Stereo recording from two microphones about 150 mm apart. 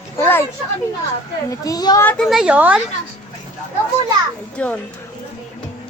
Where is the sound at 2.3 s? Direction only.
5° right (ahead or behind).